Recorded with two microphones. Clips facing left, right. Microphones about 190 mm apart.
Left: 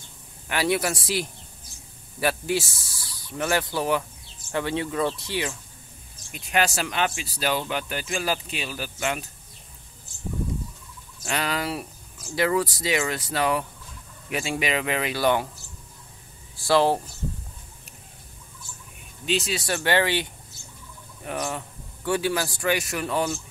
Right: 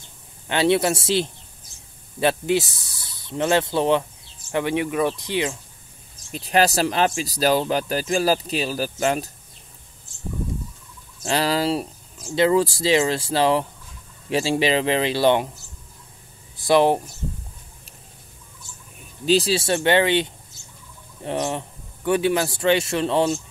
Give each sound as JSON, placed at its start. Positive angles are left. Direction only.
{"t": 0.5, "sound": "speech", "side_deg": -25}
{"t": 6.3, "sound": "speech", "side_deg": -35}
{"t": 11.2, "sound": "speech", "side_deg": -30}
{"t": 16.5, "sound": "speech", "side_deg": -20}
{"t": 19.2, "sound": "speech", "side_deg": -35}